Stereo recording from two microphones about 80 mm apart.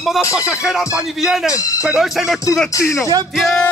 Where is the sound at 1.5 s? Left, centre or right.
Left.